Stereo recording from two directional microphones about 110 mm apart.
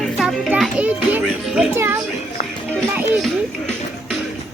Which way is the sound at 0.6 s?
10° right (ahead or behind).